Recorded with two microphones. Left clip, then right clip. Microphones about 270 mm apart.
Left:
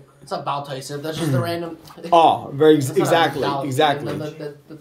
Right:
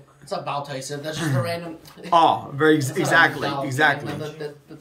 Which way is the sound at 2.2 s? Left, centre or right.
Centre.